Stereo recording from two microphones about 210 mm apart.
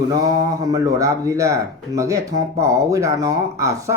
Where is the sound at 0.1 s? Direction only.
15° right (ahead or behind).